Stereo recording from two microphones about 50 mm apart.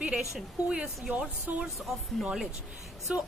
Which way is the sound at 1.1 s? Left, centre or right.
Right.